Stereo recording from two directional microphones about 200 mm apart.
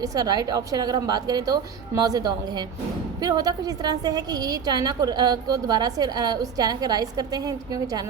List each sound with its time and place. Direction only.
0.0 s a woman's voice: 20° right (ahead or behind)